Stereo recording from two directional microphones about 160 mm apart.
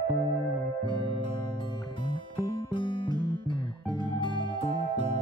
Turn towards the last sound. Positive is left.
turn(degrees=30)  # may be behind; listen again after turning